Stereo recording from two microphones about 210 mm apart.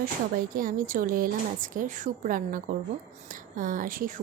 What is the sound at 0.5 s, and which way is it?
Speech, 40° right (ahead or behind).